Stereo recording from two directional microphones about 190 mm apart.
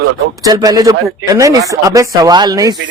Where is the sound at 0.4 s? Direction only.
20° right (ahead or behind).